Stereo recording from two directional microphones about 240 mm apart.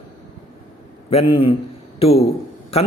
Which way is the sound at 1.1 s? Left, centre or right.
Left.